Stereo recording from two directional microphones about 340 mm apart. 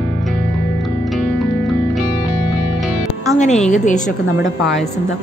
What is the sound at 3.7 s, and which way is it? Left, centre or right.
Speech, left.